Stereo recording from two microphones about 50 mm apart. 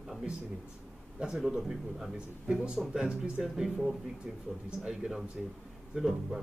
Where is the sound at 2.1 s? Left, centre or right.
Centre.